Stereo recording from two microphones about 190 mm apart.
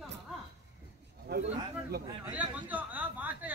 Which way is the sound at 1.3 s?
60° right (ahead or behind).